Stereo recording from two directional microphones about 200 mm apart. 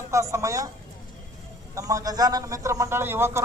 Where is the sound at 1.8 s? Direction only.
15° right (ahead or behind).